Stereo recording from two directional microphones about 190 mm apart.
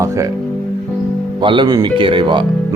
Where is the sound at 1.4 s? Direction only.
25° right (ahead or behind).